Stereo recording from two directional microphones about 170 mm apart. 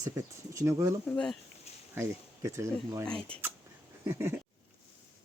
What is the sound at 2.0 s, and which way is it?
Speech, 15° right (ahead or behind).